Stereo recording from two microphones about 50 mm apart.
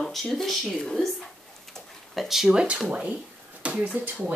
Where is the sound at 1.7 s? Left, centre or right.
Centre.